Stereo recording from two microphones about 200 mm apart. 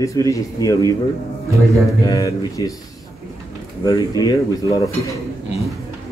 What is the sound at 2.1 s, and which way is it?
Speech, 15° left (ahead or behind).